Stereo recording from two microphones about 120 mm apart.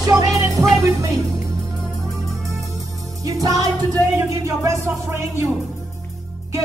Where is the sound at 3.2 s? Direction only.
30° right (ahead or behind).